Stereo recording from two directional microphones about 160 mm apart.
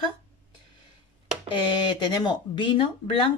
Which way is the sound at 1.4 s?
30° left (ahead or behind).